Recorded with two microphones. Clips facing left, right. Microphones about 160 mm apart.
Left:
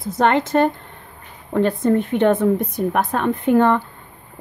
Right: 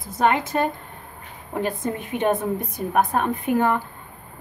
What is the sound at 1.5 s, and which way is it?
A woman's voice, 65° left (ahead or behind).